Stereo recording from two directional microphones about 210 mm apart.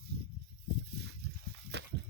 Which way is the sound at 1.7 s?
55° right (ahead or behind).